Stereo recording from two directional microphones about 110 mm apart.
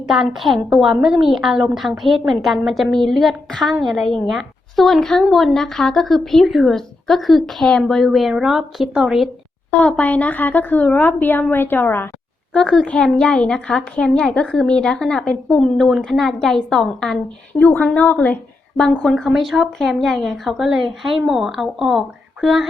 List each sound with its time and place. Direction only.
0.1 s a woman's voice: centre (ahead or behind)
10.0 s a woman's voice: 15° left (ahead or behind)
12.5 s a woman's voice: 5° left (ahead or behind)
17.6 s a woman's voice: 15° left (ahead or behind)
18.8 s a woman's voice: 5° left (ahead or behind)